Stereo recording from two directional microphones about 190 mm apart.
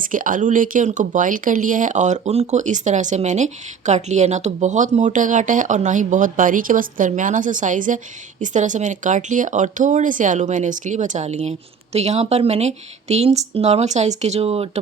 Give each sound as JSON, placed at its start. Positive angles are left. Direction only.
{"t": 0.0, "sound": "speech", "side_deg": -45}